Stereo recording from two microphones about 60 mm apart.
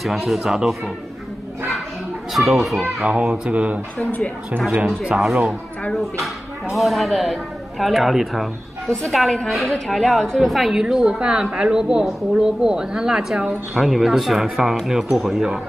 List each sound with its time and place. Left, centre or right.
0.0 s a woman's voice: centre
2.3 s a woman's voice: centre
3.1 s speech: centre
4.8 s a woman's voice: centre